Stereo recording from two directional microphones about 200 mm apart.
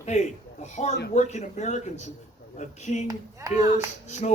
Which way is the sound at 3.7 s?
35° left (ahead or behind).